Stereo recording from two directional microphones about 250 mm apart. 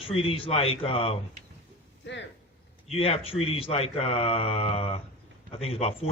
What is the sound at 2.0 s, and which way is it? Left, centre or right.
Speech, left.